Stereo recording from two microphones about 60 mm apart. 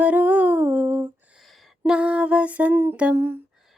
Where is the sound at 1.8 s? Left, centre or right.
Centre.